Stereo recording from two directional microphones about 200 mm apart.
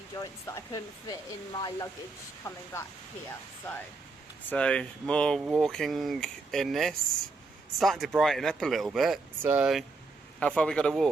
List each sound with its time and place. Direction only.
0.2 s speech: 15° left (ahead or behind)
4.4 s speech: 5° left (ahead or behind)